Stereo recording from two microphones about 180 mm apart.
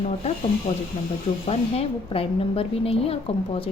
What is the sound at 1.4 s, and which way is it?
A woman's voice, 35° left (ahead or behind).